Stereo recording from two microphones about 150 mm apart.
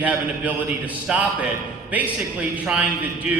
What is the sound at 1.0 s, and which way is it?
Speech, 10° right (ahead or behind).